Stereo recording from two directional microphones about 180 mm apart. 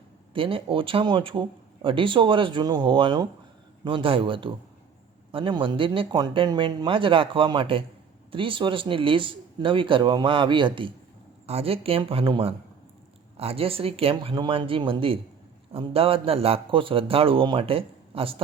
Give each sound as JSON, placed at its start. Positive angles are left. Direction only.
{"t": 0.3, "sound": "a man's voice", "side_deg": -30}